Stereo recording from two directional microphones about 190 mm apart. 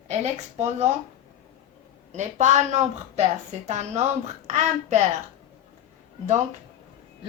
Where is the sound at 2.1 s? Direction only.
40° right (ahead or behind).